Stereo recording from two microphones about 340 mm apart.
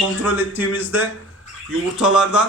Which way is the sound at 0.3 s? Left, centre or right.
Centre.